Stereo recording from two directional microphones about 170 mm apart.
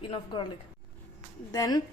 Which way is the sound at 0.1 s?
30° left (ahead or behind).